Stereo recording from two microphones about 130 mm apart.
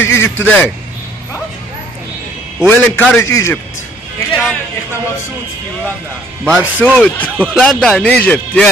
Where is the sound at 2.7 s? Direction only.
15° left (ahead or behind).